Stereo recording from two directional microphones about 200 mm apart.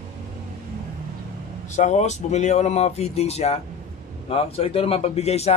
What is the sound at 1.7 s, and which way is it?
A man's voice, 35° left (ahead or behind).